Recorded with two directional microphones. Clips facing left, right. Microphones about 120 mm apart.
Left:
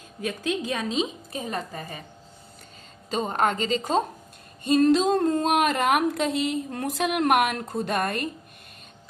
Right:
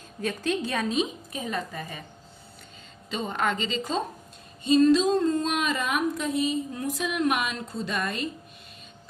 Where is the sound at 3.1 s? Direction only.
40° left (ahead or behind).